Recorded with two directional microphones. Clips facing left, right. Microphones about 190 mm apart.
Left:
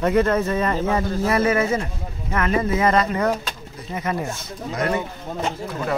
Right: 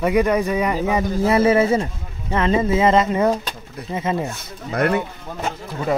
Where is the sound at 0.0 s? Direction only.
15° right (ahead or behind).